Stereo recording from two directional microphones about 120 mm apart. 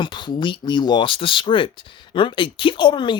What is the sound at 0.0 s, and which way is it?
Speech, 40° left (ahead or behind).